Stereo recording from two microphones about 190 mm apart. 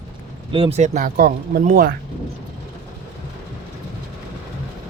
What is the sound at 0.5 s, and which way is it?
Speech, 30° right (ahead or behind).